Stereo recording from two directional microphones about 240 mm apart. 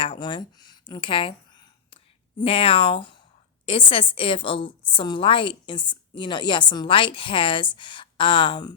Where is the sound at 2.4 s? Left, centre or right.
Left.